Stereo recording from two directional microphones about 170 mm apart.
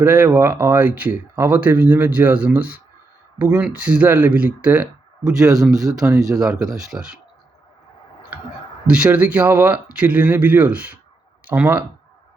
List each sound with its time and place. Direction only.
0.0 s speech: 10° right (ahead or behind)
5.8 s speech: 20° right (ahead or behind)
6.9 s speech: 5° right (ahead or behind)
8.9 s speech: 5° right (ahead or behind)